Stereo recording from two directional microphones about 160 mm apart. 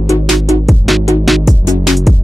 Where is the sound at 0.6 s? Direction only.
Centre (ahead or behind).